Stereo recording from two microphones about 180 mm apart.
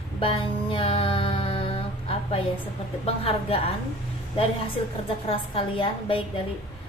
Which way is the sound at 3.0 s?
35° left (ahead or behind).